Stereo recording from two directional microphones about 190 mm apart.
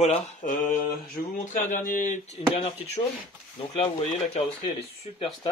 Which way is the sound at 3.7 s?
30° left (ahead or behind).